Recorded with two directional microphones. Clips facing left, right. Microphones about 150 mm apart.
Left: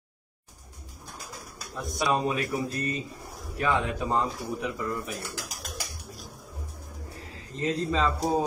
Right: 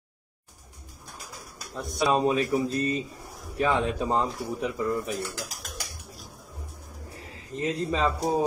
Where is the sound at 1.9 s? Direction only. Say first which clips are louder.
Right 3 dB; 25° right (ahead or behind).